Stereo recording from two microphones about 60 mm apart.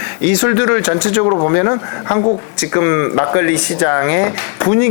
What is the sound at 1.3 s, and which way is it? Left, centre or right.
Speech, left.